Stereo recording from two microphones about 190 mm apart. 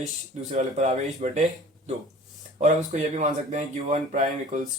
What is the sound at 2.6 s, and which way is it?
Speech, 40° right (ahead or behind).